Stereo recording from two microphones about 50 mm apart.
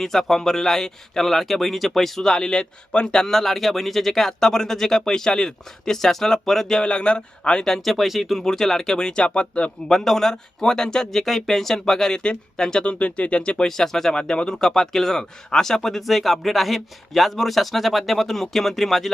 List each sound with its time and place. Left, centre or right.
0.0 s speech: centre
6.8 s speech: left
7.7 s speech: centre; by 9.7 s left
9.9 s speech: centre